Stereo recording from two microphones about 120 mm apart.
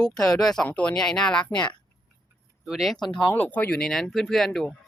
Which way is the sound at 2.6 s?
Centre (ahead or behind).